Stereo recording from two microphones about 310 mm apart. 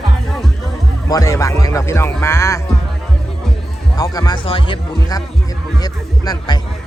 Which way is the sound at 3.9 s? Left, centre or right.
Centre.